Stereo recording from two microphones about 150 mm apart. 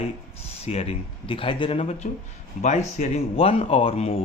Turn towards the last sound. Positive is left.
turn(degrees=40)  # may be behind; listen again after turning